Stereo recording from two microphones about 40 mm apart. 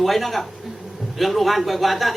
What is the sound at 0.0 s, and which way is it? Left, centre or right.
A woman's voice, centre.